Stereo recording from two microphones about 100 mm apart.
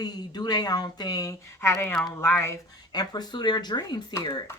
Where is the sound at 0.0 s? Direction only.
45° left (ahead or behind); by 2.6 s 25° left (ahead or behind).